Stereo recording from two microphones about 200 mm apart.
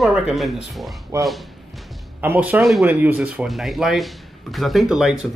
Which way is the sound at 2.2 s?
10° right (ahead or behind).